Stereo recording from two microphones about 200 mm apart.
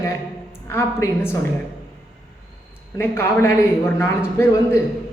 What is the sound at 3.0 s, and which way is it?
A man's voice, 10° left (ahead or behind).